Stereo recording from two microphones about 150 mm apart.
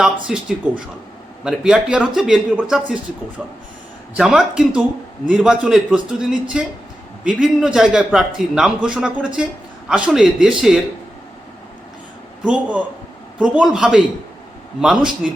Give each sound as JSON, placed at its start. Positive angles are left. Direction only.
{"t": 0.0, "sound": "speech", "side_deg": -5}
{"t": 12.5, "sound": "a man's voice", "side_deg": -10}